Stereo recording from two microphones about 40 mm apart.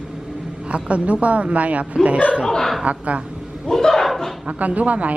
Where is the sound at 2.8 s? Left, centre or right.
Right.